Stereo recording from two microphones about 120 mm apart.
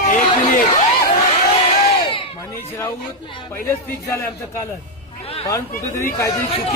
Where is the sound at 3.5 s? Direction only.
20° left (ahead or behind).